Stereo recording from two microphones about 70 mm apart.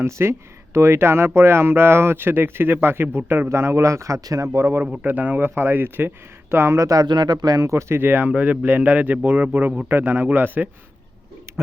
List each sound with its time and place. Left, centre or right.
0.0 s speech: right
5.0 s speech: right
6.7 s speech: right
7.0 s speech: right
7.6 s a man's voice: right
11.5 s a sound: right